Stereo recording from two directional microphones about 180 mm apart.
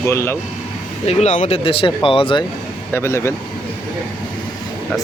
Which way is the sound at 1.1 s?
40° left (ahead or behind).